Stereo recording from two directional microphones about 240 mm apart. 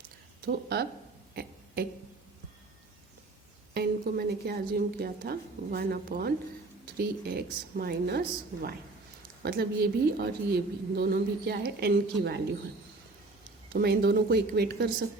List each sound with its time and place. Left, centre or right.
0.4 s a woman's voice: right
1.4 s a sound: right
3.8 s a woman's voice: right
9.4 s a woman's voice: right
13.7 s a woman's voice: right